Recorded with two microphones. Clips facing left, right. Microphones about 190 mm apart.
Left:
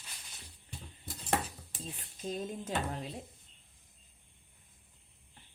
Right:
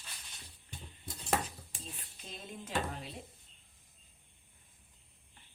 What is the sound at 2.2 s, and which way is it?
Speech, 40° left (ahead or behind).